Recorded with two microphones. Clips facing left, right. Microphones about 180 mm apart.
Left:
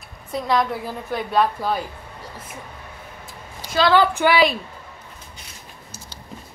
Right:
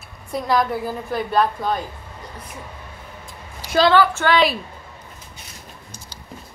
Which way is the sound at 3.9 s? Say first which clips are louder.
Even; 15° left (ahead or behind).